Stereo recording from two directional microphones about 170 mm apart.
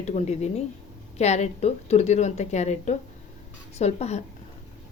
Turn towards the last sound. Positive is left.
turn(degrees=40)  # may be behind; listen again after turning